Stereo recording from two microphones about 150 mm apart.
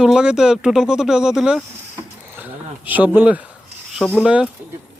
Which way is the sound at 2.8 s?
10° right (ahead or behind).